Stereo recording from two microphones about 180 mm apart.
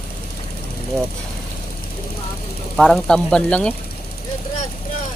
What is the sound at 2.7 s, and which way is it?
Speech, 5° left (ahead or behind).